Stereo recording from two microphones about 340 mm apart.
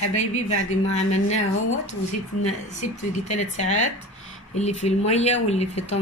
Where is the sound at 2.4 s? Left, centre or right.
Centre.